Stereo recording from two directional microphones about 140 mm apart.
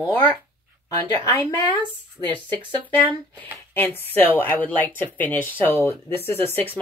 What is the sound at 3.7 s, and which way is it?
Speech, 15° left (ahead or behind).